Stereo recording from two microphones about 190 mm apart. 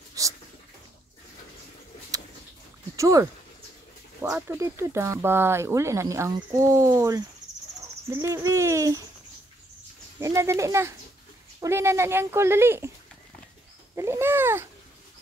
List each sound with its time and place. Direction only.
0.2 s a sound: 15° right (ahead or behind)
3.0 s speech: 15° right (ahead or behind)
10.1 s speech: 15° right (ahead or behind)
13.9 s speech: 15° right (ahead or behind)